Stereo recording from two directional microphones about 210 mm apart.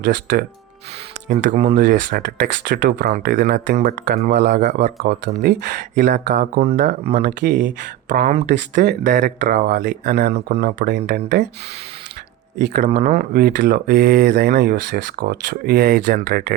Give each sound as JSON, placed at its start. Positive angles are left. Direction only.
{"t": 0.0, "sound": "speech", "side_deg": -50}
{"t": 1.3, "sound": "speech", "side_deg": -35}
{"t": 1.7, "sound": "speech", "side_deg": -50}
{"t": 4.5, "sound": "speech", "side_deg": -35}
{"t": 5.0, "sound": "speech", "side_deg": -50}
{"t": 12.5, "sound": "speech", "side_deg": -55}